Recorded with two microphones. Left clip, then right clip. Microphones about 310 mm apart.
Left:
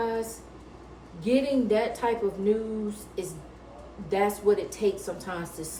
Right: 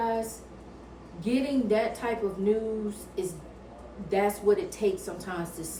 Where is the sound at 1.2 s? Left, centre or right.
Centre.